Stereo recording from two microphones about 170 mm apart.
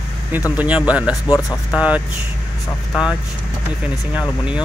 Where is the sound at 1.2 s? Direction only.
20° left (ahead or behind).